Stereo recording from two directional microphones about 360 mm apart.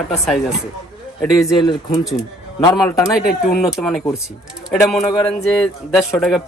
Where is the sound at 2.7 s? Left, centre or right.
Centre.